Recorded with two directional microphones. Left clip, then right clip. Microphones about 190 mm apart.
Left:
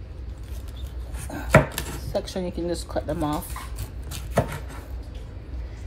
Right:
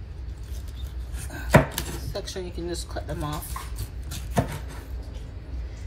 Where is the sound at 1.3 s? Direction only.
45° left (ahead or behind).